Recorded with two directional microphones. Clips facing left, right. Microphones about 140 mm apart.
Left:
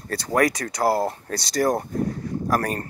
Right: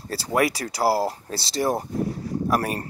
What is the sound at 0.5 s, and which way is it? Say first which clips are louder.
Speech: even; 30° right (ahead or behind).